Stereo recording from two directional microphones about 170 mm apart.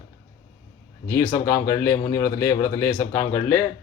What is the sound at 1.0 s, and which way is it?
A man's voice, 15° left (ahead or behind).